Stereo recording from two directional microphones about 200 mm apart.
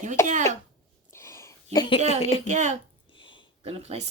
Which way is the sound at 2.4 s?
35° right (ahead or behind).